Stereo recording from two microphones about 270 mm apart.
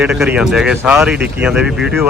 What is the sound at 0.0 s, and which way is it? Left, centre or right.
Speech, centre.